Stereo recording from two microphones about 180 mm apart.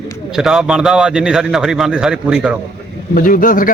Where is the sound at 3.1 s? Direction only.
50° left (ahead or behind).